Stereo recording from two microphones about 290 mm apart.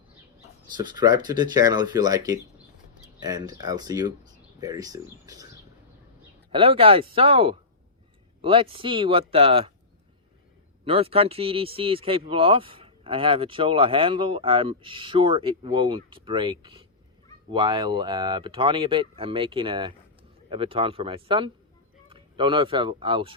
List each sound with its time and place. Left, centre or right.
0.7 s speech: centre
6.5 s speech: centre
10.8 s speech: centre